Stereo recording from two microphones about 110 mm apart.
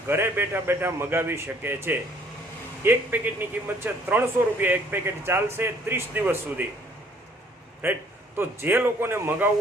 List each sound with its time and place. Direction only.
0.1 s speech: 20° right (ahead or behind)
7.8 s speech: 20° right (ahead or behind)